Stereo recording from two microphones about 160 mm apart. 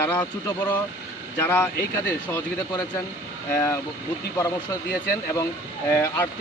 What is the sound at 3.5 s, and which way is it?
Speech, 20° left (ahead or behind).